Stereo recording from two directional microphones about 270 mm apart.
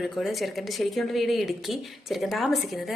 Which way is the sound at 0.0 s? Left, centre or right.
Centre.